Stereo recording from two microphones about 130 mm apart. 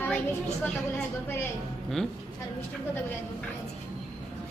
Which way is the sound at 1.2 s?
20° left (ahead or behind).